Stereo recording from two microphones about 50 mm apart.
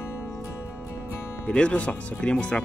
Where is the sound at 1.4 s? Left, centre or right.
Centre.